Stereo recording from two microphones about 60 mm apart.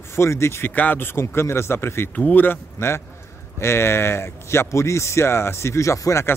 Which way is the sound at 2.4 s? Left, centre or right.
Left.